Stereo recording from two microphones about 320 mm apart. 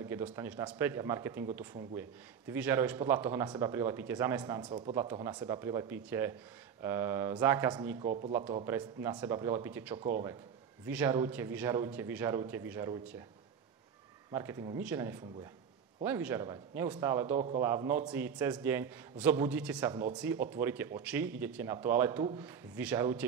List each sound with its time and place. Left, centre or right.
0.0 s speech: centre
14.3 s speech: centre